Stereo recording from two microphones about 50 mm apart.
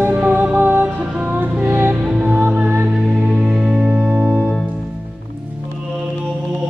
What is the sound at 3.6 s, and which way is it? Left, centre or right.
Music, centre.